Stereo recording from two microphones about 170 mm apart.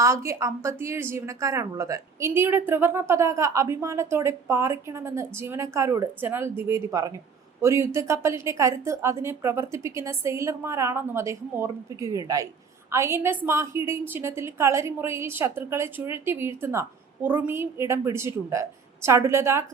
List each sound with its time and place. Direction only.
0.0 s a woman's voice: 15° right (ahead or behind)